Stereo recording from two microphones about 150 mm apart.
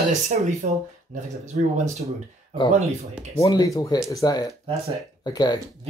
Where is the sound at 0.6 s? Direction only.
55° right (ahead or behind).